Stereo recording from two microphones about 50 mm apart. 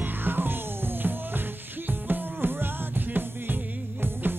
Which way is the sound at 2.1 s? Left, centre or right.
Right.